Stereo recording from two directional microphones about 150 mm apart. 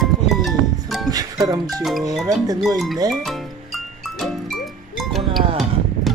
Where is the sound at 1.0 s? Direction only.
25° right (ahead or behind).